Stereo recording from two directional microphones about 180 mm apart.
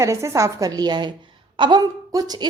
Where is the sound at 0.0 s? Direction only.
15° right (ahead or behind).